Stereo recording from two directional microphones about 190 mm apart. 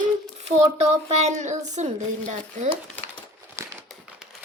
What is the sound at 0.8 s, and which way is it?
Speech, 35° right (ahead or behind).